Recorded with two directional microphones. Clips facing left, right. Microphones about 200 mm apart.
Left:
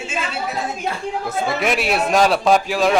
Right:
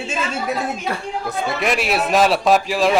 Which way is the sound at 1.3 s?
Centre (ahead or behind).